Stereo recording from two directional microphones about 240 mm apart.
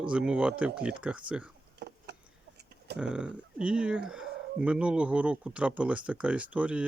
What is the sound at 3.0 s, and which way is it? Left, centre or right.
Speech, centre.